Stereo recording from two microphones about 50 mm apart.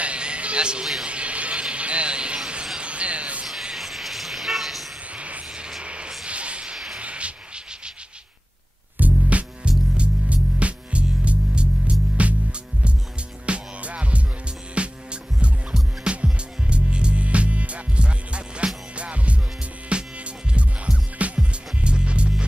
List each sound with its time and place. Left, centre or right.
0.0 s music: right
1.0 s a sound: right
3.7 s vehicle: centre
5.1 s a sound: right
8.9 s music: right
16.0 s music: right